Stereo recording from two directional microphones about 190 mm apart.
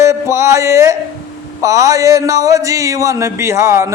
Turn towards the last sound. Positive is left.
turn(degrees=-15)  # may be behind; listen again after turning